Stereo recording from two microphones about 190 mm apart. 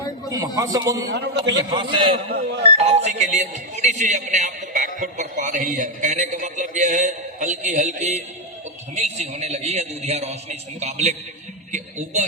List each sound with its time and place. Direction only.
0.3 s a man's voice: 20° right (ahead or behind)
1.1 s speech: 60° right (ahead or behind)
1.4 s a man's voice: 25° right (ahead or behind)
2.3 s speech: 65° right (ahead or behind)
2.7 s speech: 35° right (ahead or behind)